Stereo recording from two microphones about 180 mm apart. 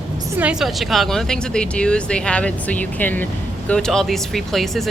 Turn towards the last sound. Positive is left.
turn(degrees=0)  # may be behind; listen again after turning